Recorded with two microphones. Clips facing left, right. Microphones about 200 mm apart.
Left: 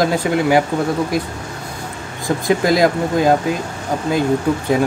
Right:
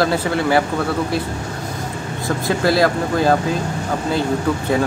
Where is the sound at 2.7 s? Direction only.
15° left (ahead or behind).